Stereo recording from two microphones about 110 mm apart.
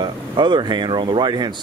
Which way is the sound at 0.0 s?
45° right (ahead or behind).